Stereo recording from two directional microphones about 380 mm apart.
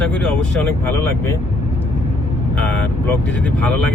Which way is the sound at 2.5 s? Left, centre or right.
Centre.